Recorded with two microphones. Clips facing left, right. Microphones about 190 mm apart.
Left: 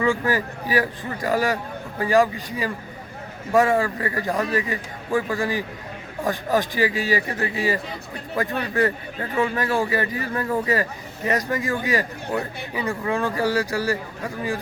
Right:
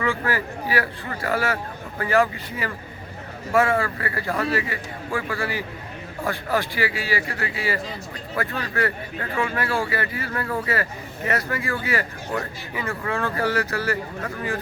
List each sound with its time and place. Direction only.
0.0 s a man's voice: 15° left (ahead or behind)
3.5 s a man's voice: 15° left (ahead or behind)